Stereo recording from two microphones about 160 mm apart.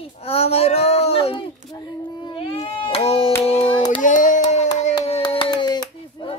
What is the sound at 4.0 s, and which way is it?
Child singing, 55° left (ahead or behind).